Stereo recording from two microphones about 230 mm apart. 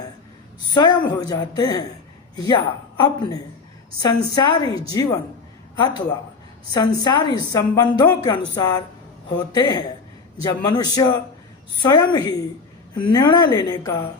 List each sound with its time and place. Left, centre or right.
0.7 s a woman's voice: centre